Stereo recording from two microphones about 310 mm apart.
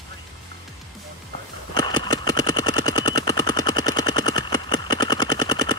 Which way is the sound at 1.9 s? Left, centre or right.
Centre.